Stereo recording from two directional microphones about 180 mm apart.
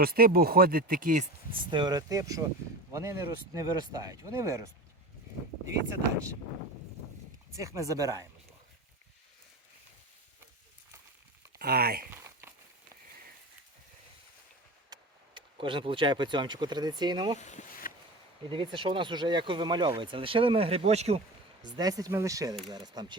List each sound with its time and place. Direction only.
0.0 s speech: 55° right (ahead or behind)
1.5 s speech: 25° right (ahead or behind)
7.6 s speech: 20° right (ahead or behind)
11.6 s speech: 60° right (ahead or behind)
12.1 s a sound: 15° right (ahead or behind)
14.9 s a sound: 20° right (ahead or behind)
15.4 s speech: 25° right (ahead or behind)
17.4 s a sound: 45° left (ahead or behind)
18.4 s speech: 25° right (ahead or behind)
21.6 s speech: 20° right (ahead or behind)